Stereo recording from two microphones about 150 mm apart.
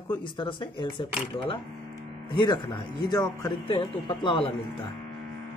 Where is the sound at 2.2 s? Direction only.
30° left (ahead or behind).